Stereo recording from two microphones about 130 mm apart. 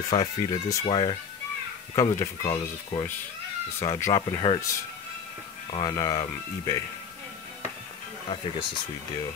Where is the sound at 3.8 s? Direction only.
25° left (ahead or behind).